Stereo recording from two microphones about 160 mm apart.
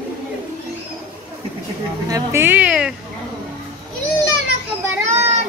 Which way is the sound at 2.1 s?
15° right (ahead or behind).